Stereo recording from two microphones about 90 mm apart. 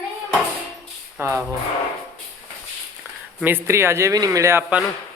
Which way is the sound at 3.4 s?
25° right (ahead or behind).